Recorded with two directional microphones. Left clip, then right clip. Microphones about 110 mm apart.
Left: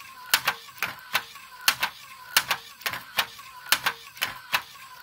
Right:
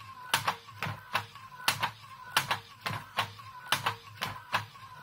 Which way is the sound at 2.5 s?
30° left (ahead or behind).